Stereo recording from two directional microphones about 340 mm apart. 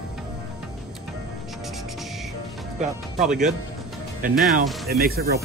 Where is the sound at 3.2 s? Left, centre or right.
Right.